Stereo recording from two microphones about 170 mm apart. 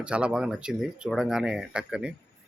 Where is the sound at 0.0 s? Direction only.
5° right (ahead or behind).